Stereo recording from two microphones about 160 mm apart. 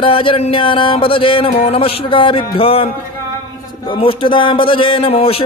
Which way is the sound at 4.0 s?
30° left (ahead or behind).